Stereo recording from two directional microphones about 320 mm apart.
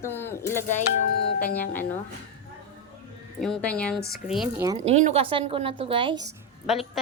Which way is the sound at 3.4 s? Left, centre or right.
Centre.